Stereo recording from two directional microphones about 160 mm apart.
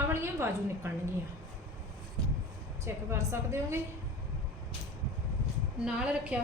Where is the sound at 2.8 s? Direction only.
15° right (ahead or behind).